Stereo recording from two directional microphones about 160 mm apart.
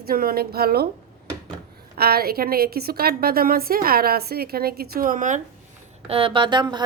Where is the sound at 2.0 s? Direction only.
75° right (ahead or behind); by 5.4 s 55° right (ahead or behind).